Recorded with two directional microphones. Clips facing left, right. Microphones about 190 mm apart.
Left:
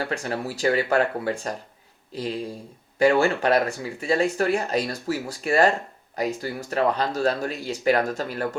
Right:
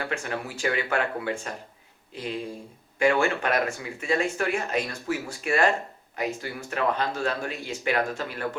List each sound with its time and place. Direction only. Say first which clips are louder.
0.0 s speech: left 3 dB; 35° left (ahead or behind)